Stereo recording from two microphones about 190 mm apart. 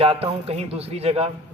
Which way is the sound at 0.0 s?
30° right (ahead or behind).